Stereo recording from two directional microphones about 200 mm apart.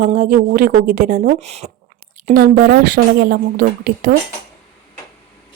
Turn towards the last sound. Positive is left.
turn(degrees=-45)  # may be behind; listen again after turning